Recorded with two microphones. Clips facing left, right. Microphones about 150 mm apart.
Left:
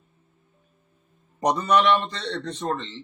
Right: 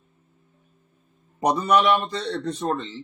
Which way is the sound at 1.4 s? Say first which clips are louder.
Right 1 dB; 10° right (ahead or behind).